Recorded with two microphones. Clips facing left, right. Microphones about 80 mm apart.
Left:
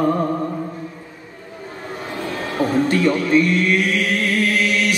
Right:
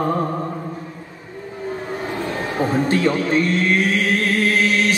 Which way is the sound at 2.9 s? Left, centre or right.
Right.